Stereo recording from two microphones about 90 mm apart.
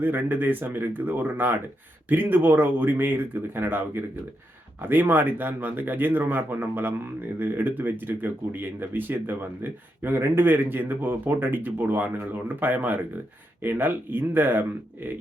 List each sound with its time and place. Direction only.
0.0 s speech: 20° right (ahead or behind)